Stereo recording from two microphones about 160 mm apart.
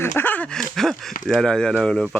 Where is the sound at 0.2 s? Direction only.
10° left (ahead or behind).